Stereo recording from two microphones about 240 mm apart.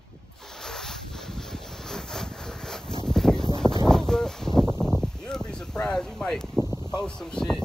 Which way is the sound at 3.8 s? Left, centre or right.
Centre.